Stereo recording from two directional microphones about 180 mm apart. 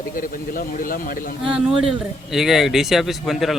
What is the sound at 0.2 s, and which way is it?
Speech, 50° left (ahead or behind).